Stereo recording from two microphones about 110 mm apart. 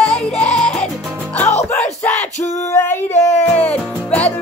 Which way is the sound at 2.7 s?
20° left (ahead or behind).